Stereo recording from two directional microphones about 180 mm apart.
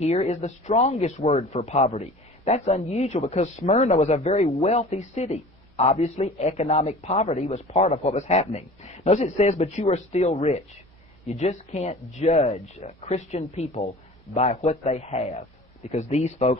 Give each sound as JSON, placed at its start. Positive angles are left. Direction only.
{"t": 0.0, "sound": "speech", "side_deg": 35}